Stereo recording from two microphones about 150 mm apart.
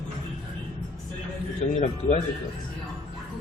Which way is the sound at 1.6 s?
55° left (ahead or behind).